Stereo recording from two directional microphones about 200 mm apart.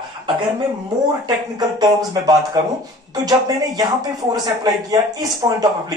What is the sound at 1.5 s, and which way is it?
Speech, 20° right (ahead or behind).